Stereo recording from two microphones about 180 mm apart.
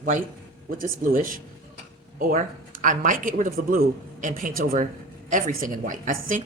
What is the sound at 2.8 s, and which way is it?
Speech, 45° right (ahead or behind).